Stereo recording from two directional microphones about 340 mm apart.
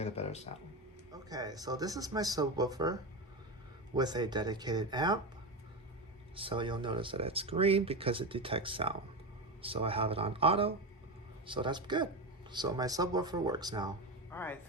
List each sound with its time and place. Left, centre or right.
0.0 s speech: centre
1.1 s speech: centre
6.3 s speech: centre
14.3 s speech: centre